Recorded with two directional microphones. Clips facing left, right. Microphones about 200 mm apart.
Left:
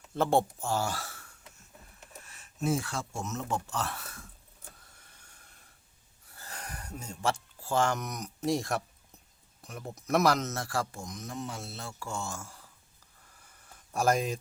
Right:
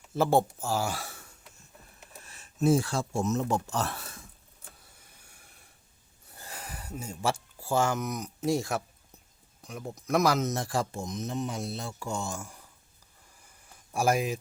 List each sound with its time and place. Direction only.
0.1 s speech: 5° right (ahead or behind)
2.2 s speech: 35° right (ahead or behind)
5.2 s snort: 10° right (ahead or behind)
6.3 s a sound: 15° right (ahead or behind)
6.6 s speech: 5° right (ahead or behind)
10.4 s speech: 15° right (ahead or behind)
13.9 s speech: 10° right (ahead or behind)